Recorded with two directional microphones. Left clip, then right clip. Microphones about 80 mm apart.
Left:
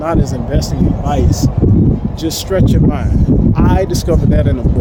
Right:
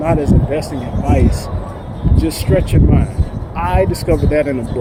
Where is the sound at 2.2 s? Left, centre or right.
Left.